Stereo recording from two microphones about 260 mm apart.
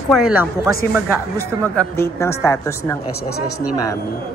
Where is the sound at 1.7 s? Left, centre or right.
Centre.